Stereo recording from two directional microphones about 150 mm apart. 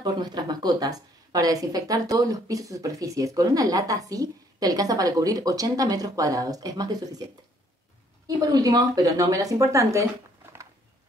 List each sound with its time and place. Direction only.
0.0 s speech: 30° right (ahead or behind)
8.4 s speech: 25° right (ahead or behind)